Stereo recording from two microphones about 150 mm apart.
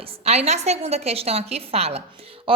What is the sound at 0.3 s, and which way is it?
A woman's voice, 45° right (ahead or behind).